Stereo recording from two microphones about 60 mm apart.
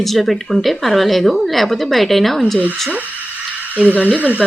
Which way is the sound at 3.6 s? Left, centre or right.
Right.